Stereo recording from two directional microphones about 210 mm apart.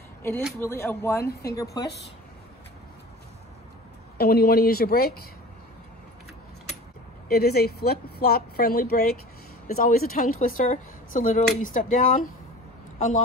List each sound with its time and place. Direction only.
0.6 s speech: 10° left (ahead or behind)
4.2 s speech: 45° left (ahead or behind)
7.2 s speech: 50° left (ahead or behind)